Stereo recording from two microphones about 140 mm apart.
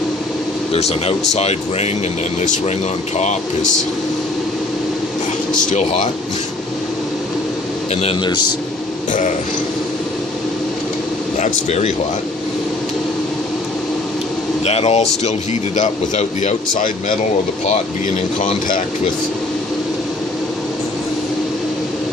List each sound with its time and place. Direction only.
0.7 s speech: 50° left (ahead or behind)
3.2 s speech: 60° left (ahead or behind)
5.7 s speech: 55° left (ahead or behind)
8.0 s a man's voice: 30° left (ahead or behind)
11.3 s speech: 55° left (ahead or behind)
14.6 s speech: 45° left (ahead or behind); by 16.9 s 60° left (ahead or behind)
18.3 s speech: 65° left (ahead or behind)